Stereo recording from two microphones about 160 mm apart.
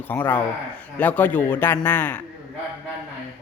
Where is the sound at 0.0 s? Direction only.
10° left (ahead or behind).